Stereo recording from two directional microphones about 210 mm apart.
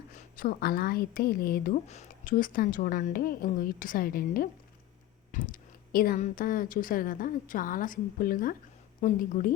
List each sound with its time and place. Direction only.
0.1 s a woman's voice: 40° left (ahead or behind)